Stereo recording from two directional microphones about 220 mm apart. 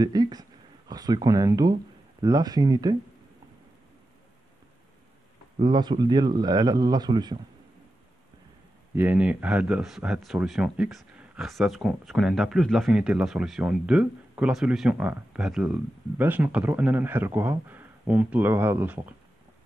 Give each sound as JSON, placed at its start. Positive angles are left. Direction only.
{"t": 0.0, "sound": "speech", "side_deg": -15}
{"t": 5.6, "sound": "speech", "side_deg": -20}
{"t": 8.9, "sound": "speech", "side_deg": -10}